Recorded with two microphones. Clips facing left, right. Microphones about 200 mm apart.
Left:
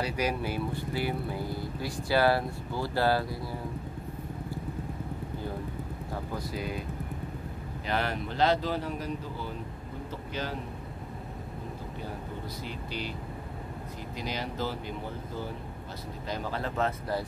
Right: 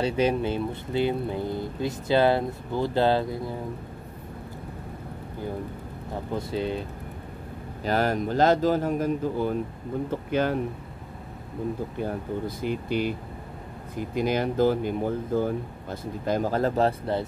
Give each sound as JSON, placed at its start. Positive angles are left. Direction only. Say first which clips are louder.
{"t": 0.0, "sound": "speech", "louder": "right 7 dB", "side_deg": -25}
{"t": 6.3, "sound": "speech", "louder": "right 9 dB", "side_deg": -25}
{"t": 7.8, "sound": "speech", "louder": "right 7 dB", "side_deg": -40}
{"t": 12.0, "sound": "speech", "louder": "right 9 dB", "side_deg": -50}
{"t": 14.1, "sound": "speech", "louder": "right 11 dB", "side_deg": -50}